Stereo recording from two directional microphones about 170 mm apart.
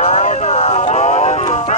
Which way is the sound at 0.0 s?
45° left (ahead or behind).